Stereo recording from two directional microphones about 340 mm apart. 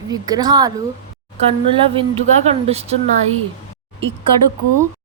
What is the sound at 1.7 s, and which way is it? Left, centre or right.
A woman's voice, centre.